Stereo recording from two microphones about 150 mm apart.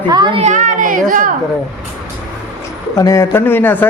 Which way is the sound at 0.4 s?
60° right (ahead or behind).